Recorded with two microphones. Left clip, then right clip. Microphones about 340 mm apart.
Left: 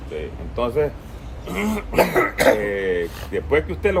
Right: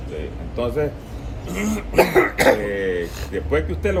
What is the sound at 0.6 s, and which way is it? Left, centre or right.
Speech, centre.